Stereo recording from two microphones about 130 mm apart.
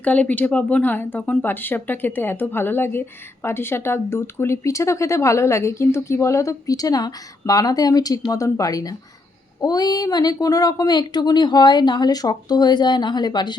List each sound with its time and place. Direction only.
0.0 s a woman's voice: 10° left (ahead or behind); by 13.6 s 35° left (ahead or behind)